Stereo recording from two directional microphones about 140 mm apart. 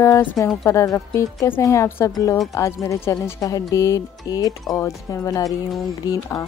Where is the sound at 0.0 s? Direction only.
20° left (ahead or behind).